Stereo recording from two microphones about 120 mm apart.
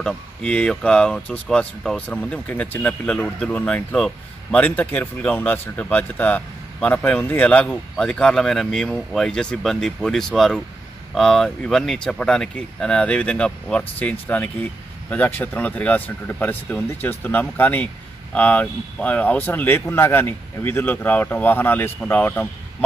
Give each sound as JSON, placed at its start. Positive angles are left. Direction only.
{"t": 0.0, "sound": "speech", "side_deg": 5}